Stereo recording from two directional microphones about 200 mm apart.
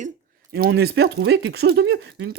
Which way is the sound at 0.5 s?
55° right (ahead or behind).